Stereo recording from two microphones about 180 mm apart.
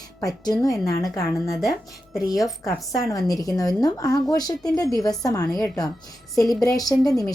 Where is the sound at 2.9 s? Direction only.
20° left (ahead or behind).